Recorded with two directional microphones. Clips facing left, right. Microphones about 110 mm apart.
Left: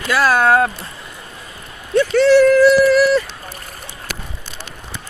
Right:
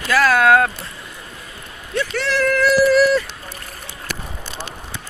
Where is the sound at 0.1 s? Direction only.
25° left (ahead or behind).